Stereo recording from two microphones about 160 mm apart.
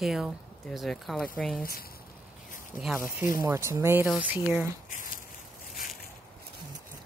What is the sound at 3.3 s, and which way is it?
Speech, 20° right (ahead or behind).